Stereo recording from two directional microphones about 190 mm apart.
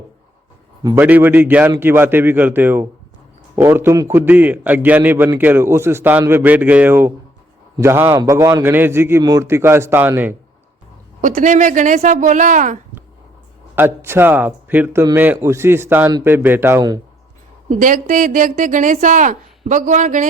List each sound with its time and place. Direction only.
0.8 s a man's voice: 15° right (ahead or behind)
11.2 s a woman's voice: 45° right (ahead or behind)
13.7 s a man's voice: 10° right (ahead or behind)
17.7 s a woman's voice: 45° right (ahead or behind)